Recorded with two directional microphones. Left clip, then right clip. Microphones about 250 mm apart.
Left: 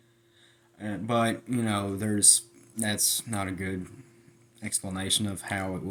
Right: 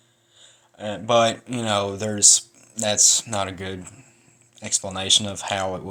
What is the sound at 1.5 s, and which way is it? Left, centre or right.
Speech, centre.